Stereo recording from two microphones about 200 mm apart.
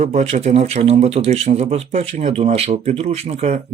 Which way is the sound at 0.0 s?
35° right (ahead or behind).